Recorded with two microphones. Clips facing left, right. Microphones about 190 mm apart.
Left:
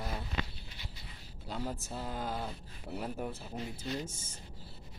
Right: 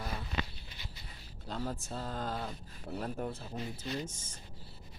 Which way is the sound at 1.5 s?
10° left (ahead or behind).